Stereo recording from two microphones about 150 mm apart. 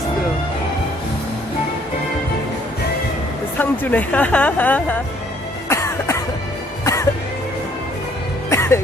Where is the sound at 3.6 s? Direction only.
10° left (ahead or behind).